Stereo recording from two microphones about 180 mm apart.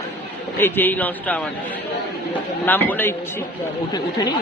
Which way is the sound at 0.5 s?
10° left (ahead or behind).